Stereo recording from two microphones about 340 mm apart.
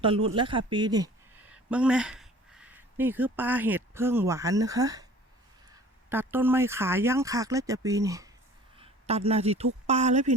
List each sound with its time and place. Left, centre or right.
0.0 s speech: centre